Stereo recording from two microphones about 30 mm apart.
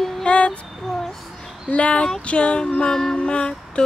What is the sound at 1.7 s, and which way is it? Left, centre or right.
Speech, left.